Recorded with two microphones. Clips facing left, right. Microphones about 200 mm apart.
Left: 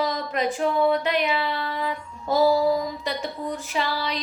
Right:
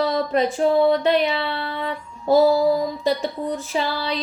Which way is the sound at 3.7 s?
30° right (ahead or behind).